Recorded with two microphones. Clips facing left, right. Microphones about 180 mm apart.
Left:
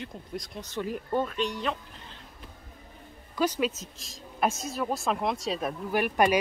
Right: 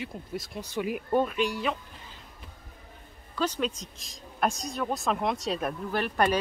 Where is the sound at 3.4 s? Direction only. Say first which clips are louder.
Left 2 dB; 10° left (ahead or behind).